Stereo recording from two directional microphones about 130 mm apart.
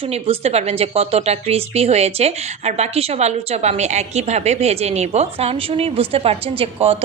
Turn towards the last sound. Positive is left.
turn(degrees=-45)  # may be behind; listen again after turning